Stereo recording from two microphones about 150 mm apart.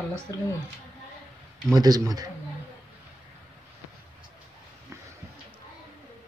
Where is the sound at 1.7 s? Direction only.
25° right (ahead or behind).